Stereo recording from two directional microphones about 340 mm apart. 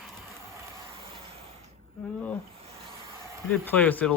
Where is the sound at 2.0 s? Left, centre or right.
Centre.